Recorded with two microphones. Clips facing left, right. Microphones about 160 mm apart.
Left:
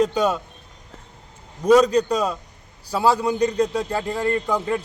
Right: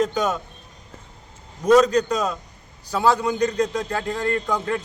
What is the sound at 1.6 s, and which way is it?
A man's voice, 10° left (ahead or behind).